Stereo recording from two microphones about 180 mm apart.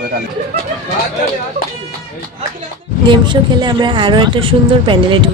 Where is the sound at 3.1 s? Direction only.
25° right (ahead or behind).